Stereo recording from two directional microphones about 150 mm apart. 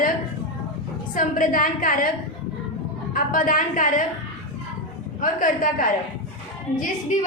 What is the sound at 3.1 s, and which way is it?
Speech, 70° left (ahead or behind).